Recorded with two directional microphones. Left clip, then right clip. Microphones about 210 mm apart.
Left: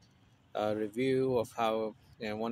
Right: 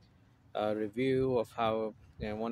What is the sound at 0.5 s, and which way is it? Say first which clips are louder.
Speech: even; centre (ahead or behind).